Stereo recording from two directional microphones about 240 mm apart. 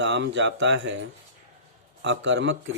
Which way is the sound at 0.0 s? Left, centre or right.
Right.